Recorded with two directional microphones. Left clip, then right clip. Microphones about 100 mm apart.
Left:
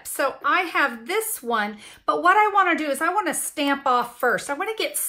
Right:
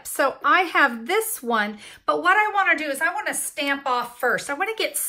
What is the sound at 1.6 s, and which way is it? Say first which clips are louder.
Speech: right 1 dB; 10° left (ahead or behind).